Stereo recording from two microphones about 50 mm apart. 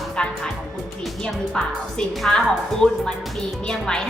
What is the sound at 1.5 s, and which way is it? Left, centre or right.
A woman's voice, centre.